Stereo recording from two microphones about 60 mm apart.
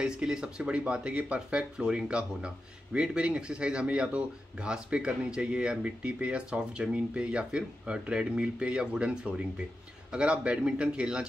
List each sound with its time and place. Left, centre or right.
0.0 s speech: centre